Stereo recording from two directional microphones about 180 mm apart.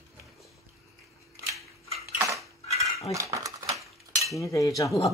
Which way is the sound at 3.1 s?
15° right (ahead or behind).